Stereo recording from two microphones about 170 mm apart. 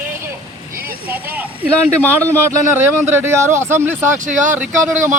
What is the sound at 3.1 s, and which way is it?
Speech, 15° right (ahead or behind).